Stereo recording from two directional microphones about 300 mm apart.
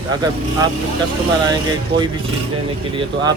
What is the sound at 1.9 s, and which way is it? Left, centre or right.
Speech, centre.